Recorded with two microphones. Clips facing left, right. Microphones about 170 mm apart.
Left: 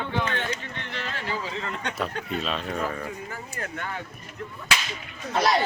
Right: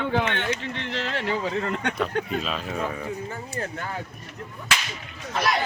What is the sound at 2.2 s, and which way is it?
Speech, centre (ahead or behind).